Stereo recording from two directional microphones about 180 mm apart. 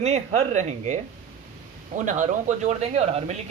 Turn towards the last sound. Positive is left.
turn(degrees=-40)  # may be behind; listen again after turning